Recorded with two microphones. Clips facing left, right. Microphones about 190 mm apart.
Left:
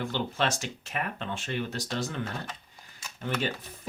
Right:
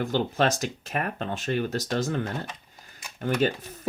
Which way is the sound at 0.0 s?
40° right (ahead or behind).